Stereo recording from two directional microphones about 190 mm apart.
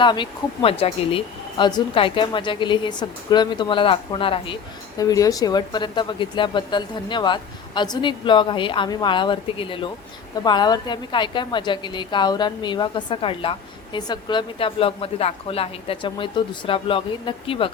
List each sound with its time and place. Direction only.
0.0 s a woman's voice: 25° left (ahead or behind)